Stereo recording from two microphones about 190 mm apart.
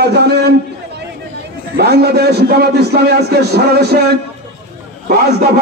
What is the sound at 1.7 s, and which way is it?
A man's voice, 55° right (ahead or behind).